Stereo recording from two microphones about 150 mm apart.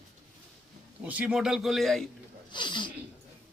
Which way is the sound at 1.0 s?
10° right (ahead or behind).